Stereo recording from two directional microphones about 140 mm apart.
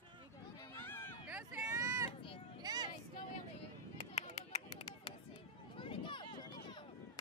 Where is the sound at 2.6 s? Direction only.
30° right (ahead or behind).